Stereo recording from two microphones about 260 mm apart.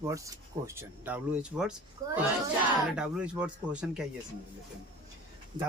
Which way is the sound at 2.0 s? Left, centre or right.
Centre.